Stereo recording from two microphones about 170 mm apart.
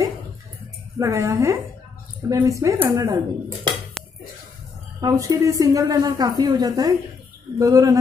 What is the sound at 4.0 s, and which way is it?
Dishes, 5° left (ahead or behind).